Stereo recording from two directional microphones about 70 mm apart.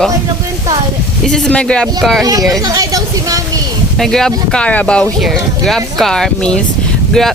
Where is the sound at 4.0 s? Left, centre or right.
Centre.